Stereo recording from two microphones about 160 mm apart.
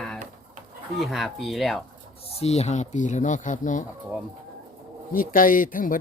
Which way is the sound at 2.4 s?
40° left (ahead or behind).